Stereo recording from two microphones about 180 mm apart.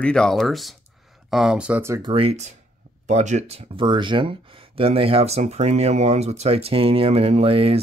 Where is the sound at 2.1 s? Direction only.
30° right (ahead or behind).